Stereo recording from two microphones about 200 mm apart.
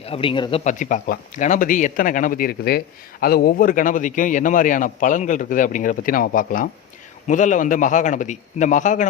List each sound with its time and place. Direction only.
0.0 s speech: 25° left (ahead or behind)
0.6 s speech: 40° left (ahead or behind)